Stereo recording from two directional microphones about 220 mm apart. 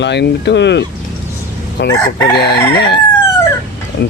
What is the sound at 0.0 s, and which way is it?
Speech, 50° left (ahead or behind).